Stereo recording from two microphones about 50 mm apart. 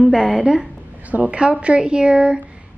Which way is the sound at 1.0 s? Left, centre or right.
Right.